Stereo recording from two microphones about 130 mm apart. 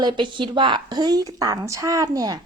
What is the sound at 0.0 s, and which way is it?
Speech, 35° right (ahead or behind).